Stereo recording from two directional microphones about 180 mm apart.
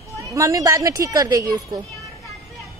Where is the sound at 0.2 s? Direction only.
15° right (ahead or behind).